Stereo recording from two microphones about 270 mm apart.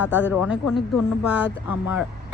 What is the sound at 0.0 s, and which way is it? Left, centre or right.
Speech, centre.